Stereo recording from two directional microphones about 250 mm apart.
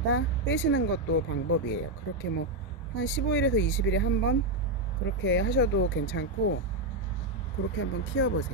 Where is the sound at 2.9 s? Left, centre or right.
Left.